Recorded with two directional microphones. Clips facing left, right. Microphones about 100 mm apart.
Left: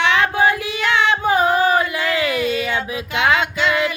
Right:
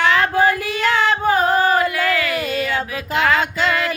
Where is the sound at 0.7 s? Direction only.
40° right (ahead or behind).